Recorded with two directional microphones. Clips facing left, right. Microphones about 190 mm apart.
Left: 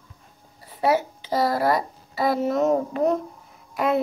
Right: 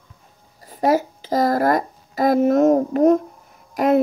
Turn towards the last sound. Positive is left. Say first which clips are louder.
# right 6 dB
turn(degrees=-40)  # may be behind; listen again after turning